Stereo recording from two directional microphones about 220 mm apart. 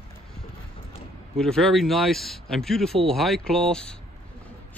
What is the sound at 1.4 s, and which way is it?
Speech, 5° left (ahead or behind).